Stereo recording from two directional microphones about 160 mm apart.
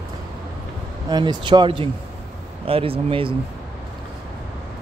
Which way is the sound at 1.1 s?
30° right (ahead or behind).